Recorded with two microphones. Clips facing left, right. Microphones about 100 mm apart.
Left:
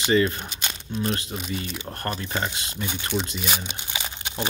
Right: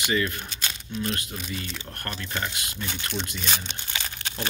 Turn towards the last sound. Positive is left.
turn(degrees=20)  # may be behind; listen again after turning